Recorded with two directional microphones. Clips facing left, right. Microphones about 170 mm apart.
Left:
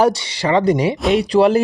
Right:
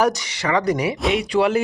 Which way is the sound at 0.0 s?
30° left (ahead or behind).